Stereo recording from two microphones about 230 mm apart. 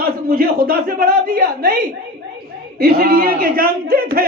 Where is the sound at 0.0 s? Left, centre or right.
Right.